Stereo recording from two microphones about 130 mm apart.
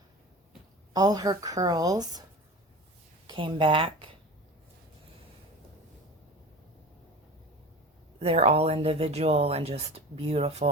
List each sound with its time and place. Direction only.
0.9 s a woman's voice: 30° right (ahead or behind)
3.2 s speech: 40° right (ahead or behind)
8.2 s speech: 50° right (ahead or behind)